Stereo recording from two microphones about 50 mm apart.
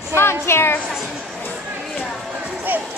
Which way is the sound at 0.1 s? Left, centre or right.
Left.